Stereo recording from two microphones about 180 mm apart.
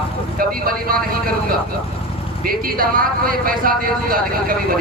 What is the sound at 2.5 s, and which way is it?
Speech, 55° right (ahead or behind).